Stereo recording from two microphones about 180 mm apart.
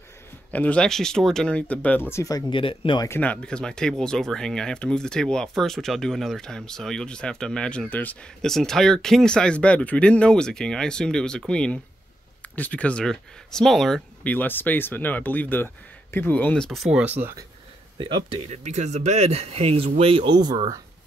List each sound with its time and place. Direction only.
0.5 s speech: 10° left (ahead or behind); by 3.1 s 30° left (ahead or behind)
3.1 s speech: 10° left (ahead or behind)
17.2 s speech: 15° right (ahead or behind)
17.9 s speech: 30° right (ahead or behind)